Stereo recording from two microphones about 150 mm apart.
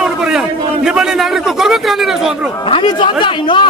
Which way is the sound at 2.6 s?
35° left (ahead or behind).